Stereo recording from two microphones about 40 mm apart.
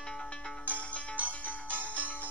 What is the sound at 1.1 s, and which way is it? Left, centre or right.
Music, right.